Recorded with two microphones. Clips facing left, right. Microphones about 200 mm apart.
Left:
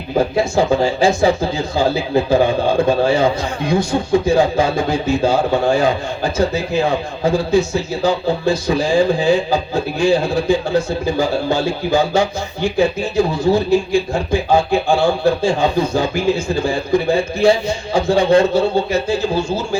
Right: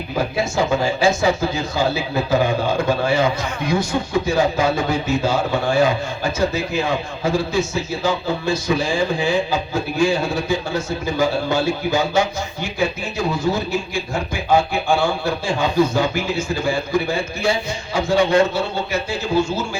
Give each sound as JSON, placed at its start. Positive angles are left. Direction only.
{"t": 0.3, "sound": "speech", "side_deg": 30}
{"t": 16.6, "sound": "speech", "side_deg": 35}